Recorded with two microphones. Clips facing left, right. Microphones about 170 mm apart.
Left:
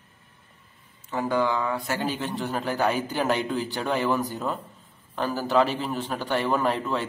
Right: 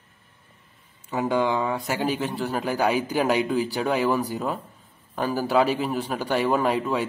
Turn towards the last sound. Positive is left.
turn(degrees=-10)  # may be behind; listen again after turning